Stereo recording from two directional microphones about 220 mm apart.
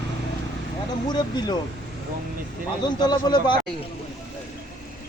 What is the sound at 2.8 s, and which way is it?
Speech, 20° left (ahead or behind).